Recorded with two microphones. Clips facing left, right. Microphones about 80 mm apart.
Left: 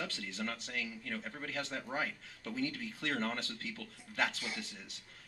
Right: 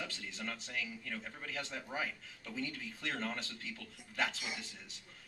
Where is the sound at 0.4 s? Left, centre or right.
Left.